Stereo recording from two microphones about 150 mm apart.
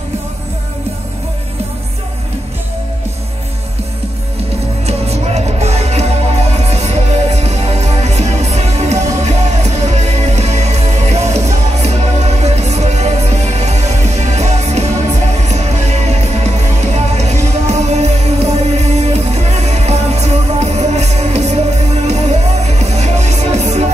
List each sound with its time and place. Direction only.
4.8 s music: 45° right (ahead or behind)